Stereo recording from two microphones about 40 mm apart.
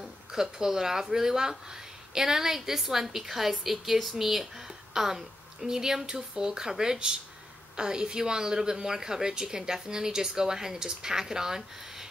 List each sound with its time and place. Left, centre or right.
0.0 s a woman's voice: centre